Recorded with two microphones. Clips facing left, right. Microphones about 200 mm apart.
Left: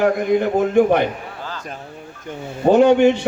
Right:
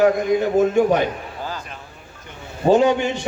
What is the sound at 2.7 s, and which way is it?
Speech, 60° left (ahead or behind).